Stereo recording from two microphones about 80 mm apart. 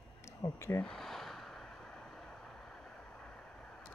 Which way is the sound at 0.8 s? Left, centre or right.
Centre.